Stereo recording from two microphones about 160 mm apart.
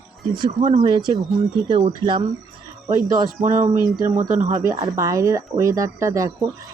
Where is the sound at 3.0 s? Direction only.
55° right (ahead or behind).